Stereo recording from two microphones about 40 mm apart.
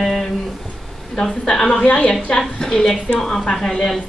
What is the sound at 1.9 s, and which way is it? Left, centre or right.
Speech, left.